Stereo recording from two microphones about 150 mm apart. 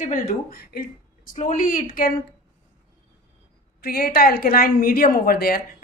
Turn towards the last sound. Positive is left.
turn(degrees=80)